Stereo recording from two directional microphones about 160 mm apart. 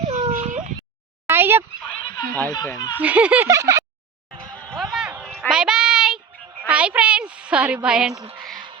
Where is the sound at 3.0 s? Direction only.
10° right (ahead or behind).